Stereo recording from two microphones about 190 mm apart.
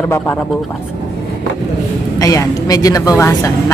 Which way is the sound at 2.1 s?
15° left (ahead or behind).